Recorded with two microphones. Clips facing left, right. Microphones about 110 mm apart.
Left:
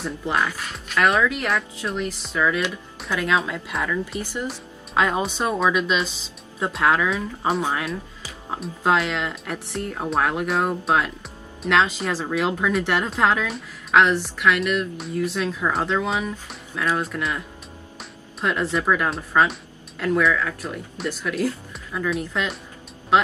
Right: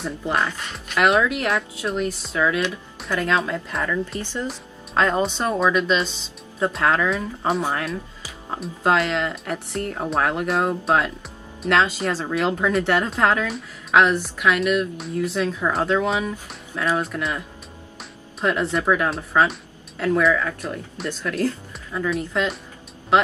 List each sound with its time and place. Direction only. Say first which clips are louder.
0.5 s speech: even; 5° left (ahead or behind)
2.3 s speech: even; 15° right (ahead or behind)
3.0 s speech: right 1 dB; 5° left (ahead or behind)
4.2 s speech: even; 15° left (ahead or behind)
18.4 s speech: right 1 dB; centre (ahead or behind)
21.1 s speech: right 1 dB; 10° left (ahead or behind)